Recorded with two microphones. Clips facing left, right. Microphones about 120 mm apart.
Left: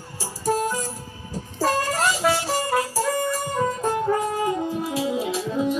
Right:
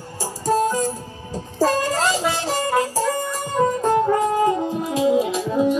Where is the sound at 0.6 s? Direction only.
15° right (ahead or behind).